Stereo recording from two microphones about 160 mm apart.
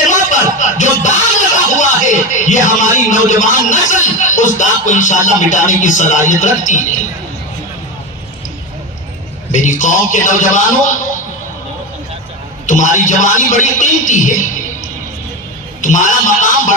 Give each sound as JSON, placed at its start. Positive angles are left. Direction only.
{"t": 0.1, "sound": "music", "side_deg": 50}
{"t": 3.1, "sound": "speech", "side_deg": 50}
{"t": 9.5, "sound": "speech", "side_deg": 50}
{"t": 12.6, "sound": "speech", "side_deg": 50}
{"t": 15.8, "sound": "speech", "side_deg": 50}